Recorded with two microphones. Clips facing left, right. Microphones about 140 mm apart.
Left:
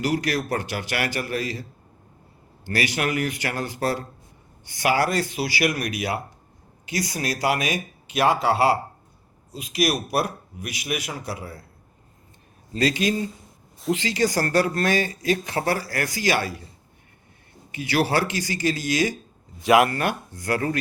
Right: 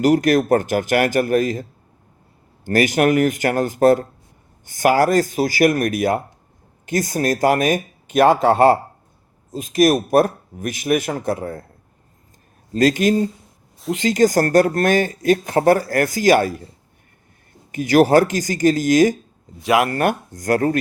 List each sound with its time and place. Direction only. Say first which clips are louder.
0.0 s speech: right 9 dB; 45° right (ahead or behind)
2.6 s speech: right 9 dB; 45° right (ahead or behind)
12.7 s speech: right 7 dB; 45° right (ahead or behind)
13.7 s speech: even; centre (ahead or behind)
14.0 s speech: right 11 dB; 45° right (ahead or behind)
17.7 s speech: right 9 dB; 45° right (ahead or behind)
19.5 s speech: even; centre (ahead or behind)
19.9 s speech: right 6 dB; 45° right (ahead or behind)